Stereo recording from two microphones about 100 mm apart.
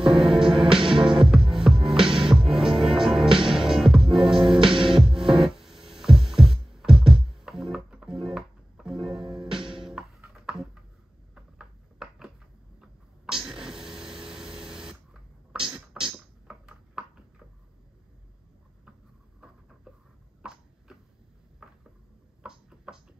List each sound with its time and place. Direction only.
0.0 s music: 5° right (ahead or behind)
0.6 s music: 60° right (ahead or behind)
0.8 s music: 5° right (ahead or behind)
11.3 s a sound: 5° right (ahead or behind)
13.3 s a sound: 5° right (ahead or behind)
16.0 s music: 10° right (ahead or behind)
16.4 s ping: 5° right (ahead or behind)
21.6 s a sound: 5° right (ahead or behind)
22.4 s music: 5° right (ahead or behind)